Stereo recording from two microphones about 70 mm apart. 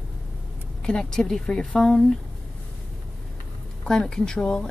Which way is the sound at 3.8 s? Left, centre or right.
Centre.